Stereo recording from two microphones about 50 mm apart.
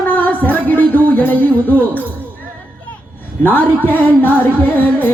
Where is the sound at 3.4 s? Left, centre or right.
Left.